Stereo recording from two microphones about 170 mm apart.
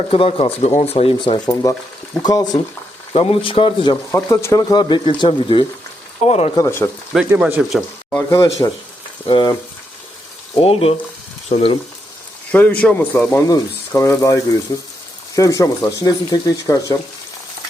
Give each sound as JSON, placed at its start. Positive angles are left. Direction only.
{"t": 0.1, "sound": "speech", "side_deg": 35}
{"t": 1.6, "sound": "speech", "side_deg": 20}
{"t": 3.1, "sound": "speech", "side_deg": 35}
{"t": 4.1, "sound": "speech", "side_deg": 15}
{"t": 6.2, "sound": "speech", "side_deg": 40}
{"t": 6.6, "sound": "speech", "side_deg": 15}
{"t": 7.1, "sound": "speech", "side_deg": -5}
{"t": 8.3, "sound": "speech", "side_deg": 20}
{"t": 10.6, "sound": "speech", "side_deg": 35}
{"t": 12.5, "sound": "speech", "side_deg": 10}